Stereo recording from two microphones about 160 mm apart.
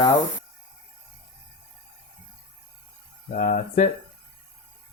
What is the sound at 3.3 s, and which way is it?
Speech, 50° left (ahead or behind).